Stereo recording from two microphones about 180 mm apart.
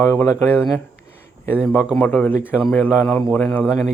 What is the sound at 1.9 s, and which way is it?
Speech, 10° left (ahead or behind).